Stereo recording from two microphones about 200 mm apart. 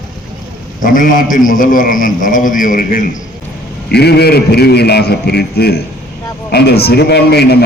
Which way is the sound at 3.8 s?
55° left (ahead or behind).